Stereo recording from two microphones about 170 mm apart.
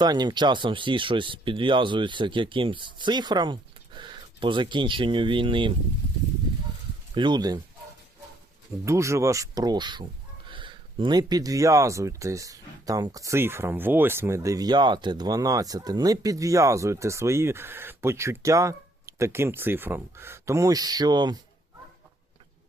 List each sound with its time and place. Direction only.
0.0 s speech: 25° right (ahead or behind)
7.1 s speech: 25° right (ahead or behind)
8.8 s speech: 15° right (ahead or behind)